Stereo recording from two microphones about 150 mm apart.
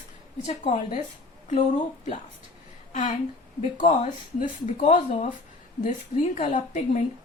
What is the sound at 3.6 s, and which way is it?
A woman's voice, 45° left (ahead or behind).